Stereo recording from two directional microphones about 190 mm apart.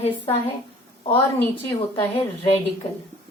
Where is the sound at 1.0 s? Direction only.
30° left (ahead or behind).